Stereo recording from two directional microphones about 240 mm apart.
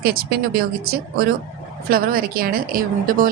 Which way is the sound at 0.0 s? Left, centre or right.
Right.